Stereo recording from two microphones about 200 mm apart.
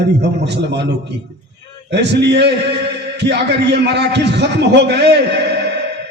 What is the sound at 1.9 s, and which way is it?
A man's voice, 60° right (ahead or behind).